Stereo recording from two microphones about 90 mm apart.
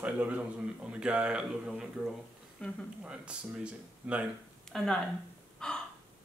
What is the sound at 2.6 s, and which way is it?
Speech, 10° left (ahead or behind).